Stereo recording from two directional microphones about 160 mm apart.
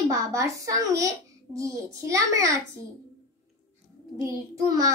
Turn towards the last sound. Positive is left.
turn(degrees=-20)  # may be behind; listen again after turning